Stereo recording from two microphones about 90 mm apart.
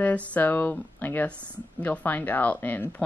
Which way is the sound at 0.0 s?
20° left (ahead or behind).